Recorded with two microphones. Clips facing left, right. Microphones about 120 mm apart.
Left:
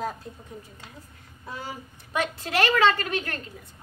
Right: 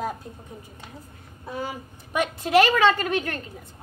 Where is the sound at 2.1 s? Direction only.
15° right (ahead or behind).